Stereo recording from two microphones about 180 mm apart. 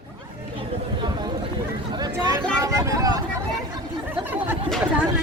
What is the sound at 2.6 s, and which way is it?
Vehicle, 15° right (ahead or behind).